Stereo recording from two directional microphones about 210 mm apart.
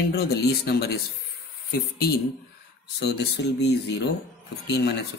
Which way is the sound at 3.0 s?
55° left (ahead or behind).